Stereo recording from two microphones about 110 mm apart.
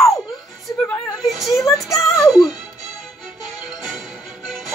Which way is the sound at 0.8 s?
15° left (ahead or behind).